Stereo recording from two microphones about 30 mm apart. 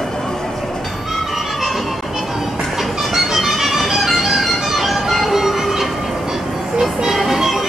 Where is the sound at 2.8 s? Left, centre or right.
Centre.